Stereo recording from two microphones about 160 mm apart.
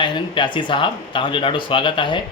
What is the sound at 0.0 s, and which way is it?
Speech, 30° left (ahead or behind).